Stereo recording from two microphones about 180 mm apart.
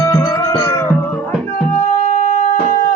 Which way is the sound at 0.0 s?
20° left (ahead or behind).